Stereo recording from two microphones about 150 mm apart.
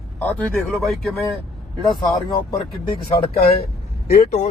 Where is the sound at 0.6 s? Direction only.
Centre (ahead or behind).